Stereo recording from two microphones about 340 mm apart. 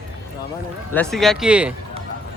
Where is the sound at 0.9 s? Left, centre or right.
Centre.